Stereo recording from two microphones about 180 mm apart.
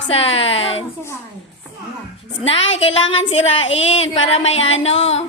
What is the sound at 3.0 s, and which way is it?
Speech, 90° left.